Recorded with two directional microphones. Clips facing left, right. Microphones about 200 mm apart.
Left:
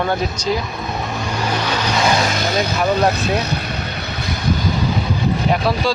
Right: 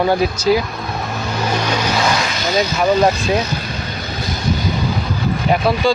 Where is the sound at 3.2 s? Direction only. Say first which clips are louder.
Right 2 dB; 60° left (ahead or behind).